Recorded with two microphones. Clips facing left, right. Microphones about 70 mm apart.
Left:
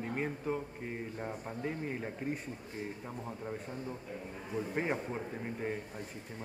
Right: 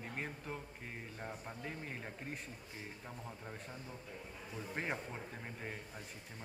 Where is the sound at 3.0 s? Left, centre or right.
Left.